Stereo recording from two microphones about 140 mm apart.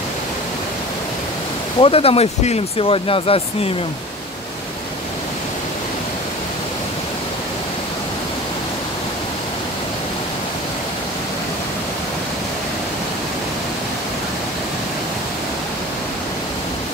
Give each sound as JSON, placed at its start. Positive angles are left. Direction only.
{"t": 1.8, "sound": "speech", "side_deg": 45}